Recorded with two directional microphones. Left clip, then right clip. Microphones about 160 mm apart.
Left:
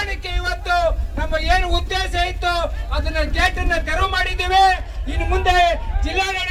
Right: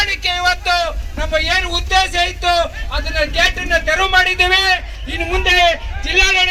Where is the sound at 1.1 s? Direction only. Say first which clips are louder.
Right 7 dB; 50° left (ahead or behind).